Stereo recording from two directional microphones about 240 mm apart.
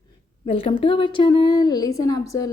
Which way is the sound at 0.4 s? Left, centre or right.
Left.